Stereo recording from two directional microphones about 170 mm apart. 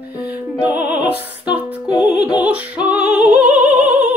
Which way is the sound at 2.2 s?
10° right (ahead or behind).